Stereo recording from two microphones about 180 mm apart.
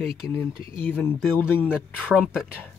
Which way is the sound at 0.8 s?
10° left (ahead or behind).